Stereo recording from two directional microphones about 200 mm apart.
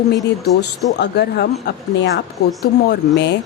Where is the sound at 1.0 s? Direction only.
55° left (ahead or behind).